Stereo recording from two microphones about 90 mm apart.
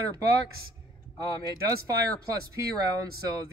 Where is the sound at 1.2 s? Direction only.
50° left (ahead or behind).